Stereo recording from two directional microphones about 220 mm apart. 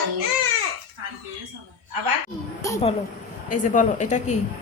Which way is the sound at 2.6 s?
15° left (ahead or behind).